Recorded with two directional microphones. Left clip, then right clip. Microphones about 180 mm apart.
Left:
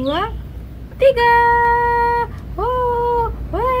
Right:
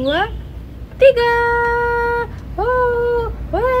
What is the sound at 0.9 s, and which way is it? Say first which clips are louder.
Music: right 1 dB; centre (ahead or behind).